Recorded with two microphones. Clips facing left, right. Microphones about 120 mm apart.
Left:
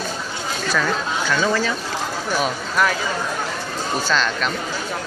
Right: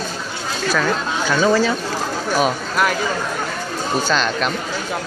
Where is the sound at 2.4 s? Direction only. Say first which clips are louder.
Right 2 dB; 10° right (ahead or behind).